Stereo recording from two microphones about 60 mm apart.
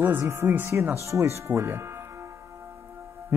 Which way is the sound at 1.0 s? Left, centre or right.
Right.